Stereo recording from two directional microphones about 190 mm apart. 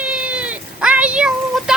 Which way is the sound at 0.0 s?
5° right (ahead or behind).